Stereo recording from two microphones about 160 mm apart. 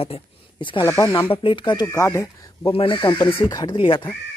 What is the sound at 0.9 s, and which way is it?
Speech, 20° left (ahead or behind).